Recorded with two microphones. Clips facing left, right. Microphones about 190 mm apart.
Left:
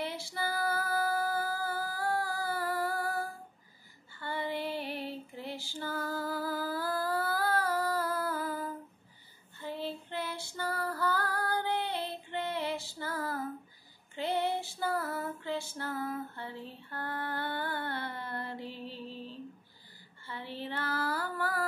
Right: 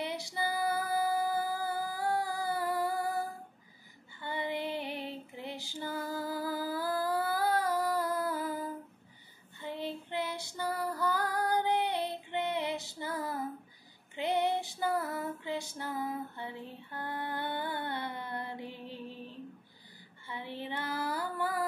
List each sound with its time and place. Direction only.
0.0 s female singing: 20° right (ahead or behind)
9.6 s child singing: 20° right (ahead or behind)
14.1 s female singing: 20° right (ahead or behind)